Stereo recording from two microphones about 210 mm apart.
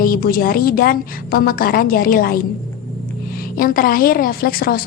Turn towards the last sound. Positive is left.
turn(degrees=45)  # may be behind; listen again after turning